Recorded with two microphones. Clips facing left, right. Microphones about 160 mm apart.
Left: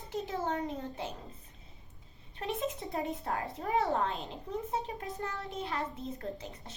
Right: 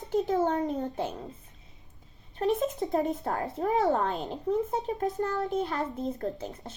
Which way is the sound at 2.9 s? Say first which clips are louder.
Right 7 dB; 40° right (ahead or behind).